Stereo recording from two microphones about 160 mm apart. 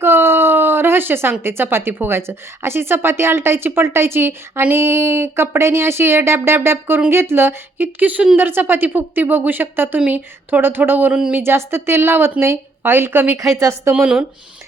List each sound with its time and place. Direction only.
0.0 s speech: 15° right (ahead or behind)
14.0 s speech: 5° right (ahead or behind)